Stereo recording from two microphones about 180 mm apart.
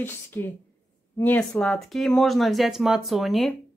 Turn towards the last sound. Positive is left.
turn(degrees=0)  # may be behind; listen again after turning